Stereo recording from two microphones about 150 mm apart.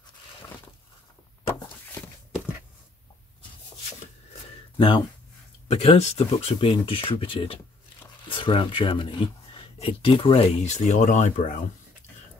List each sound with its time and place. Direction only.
4.7 s speech: 30° left (ahead or behind); by 11.5 s 55° left (ahead or behind)